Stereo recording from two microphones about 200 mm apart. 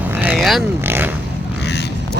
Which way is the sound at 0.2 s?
5° right (ahead or behind).